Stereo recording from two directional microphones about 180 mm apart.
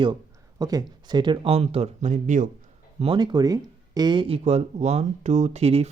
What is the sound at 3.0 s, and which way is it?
Speech, 25° right (ahead or behind).